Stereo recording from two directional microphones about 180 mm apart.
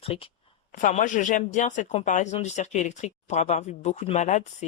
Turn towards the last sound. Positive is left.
turn(degrees=40)  # may be behind; listen again after turning